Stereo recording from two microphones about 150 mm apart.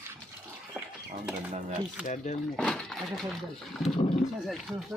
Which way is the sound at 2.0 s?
50° left (ahead or behind).